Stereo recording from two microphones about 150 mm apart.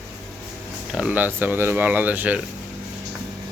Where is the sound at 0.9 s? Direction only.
10° right (ahead or behind).